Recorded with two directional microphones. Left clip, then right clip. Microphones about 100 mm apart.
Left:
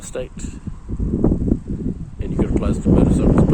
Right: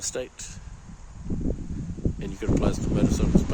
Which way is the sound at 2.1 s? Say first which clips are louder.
Left 6 dB; 35° right (ahead or behind).